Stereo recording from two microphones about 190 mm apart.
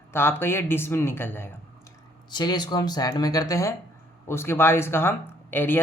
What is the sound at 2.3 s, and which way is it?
Speech, 20° left (ahead or behind).